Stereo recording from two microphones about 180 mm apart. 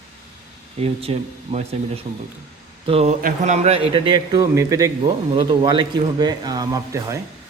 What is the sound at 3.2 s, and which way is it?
Speech, 45° right (ahead or behind).